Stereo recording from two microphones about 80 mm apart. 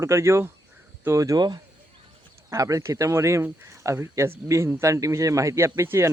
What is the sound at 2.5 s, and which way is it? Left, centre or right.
Speech, right.